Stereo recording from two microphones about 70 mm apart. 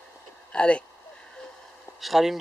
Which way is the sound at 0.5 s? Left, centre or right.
Centre.